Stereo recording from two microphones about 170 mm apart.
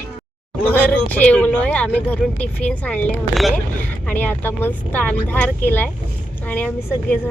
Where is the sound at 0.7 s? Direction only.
10° left (ahead or behind).